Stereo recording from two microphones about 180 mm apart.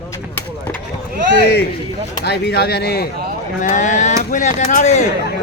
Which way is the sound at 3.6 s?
45° left (ahead or behind).